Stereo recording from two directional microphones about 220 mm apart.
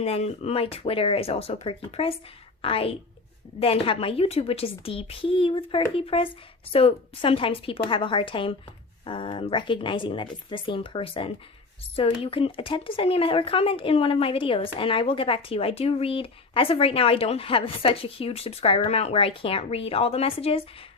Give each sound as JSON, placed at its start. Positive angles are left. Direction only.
{"t": 0.0, "sound": "speech", "side_deg": 30}